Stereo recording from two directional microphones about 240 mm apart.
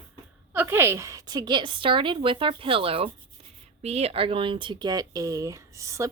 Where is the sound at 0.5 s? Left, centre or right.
Centre.